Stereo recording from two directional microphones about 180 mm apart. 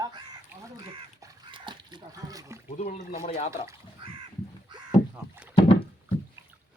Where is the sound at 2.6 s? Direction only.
40° left (ahead or behind).